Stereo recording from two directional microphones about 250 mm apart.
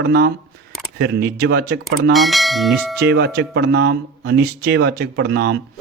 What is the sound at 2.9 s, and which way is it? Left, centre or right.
Speech, right.